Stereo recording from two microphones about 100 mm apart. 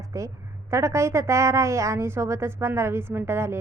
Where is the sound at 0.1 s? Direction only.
30° right (ahead or behind).